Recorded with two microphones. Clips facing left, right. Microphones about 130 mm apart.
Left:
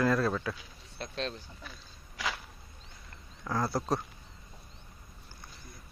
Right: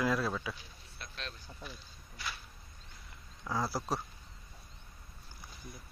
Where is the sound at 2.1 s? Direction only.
90° left.